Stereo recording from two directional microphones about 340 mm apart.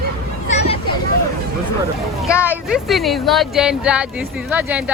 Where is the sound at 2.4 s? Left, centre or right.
Centre.